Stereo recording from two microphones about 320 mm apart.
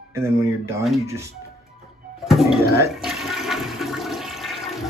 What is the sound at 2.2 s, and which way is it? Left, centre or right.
Toilet flush, centre.